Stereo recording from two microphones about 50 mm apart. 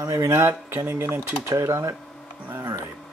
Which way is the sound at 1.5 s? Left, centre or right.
Right.